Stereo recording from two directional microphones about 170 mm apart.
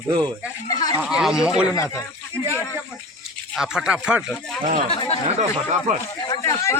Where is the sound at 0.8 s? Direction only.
25° left (ahead or behind).